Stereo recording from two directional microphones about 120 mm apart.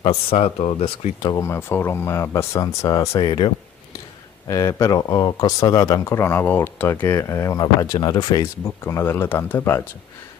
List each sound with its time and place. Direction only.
0.0 s speech: 55° left (ahead or behind)
1.2 s speech: 25° left (ahead or behind)
3.3 s speech: 40° left (ahead or behind)
4.5 s speech: 25° left (ahead or behind)
8.6 s speech: 20° left (ahead or behind)